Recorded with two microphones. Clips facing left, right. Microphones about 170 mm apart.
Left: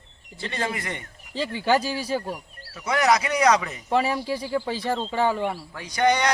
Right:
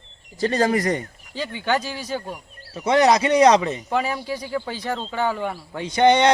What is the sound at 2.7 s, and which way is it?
A man's voice, 30° right (ahead or behind).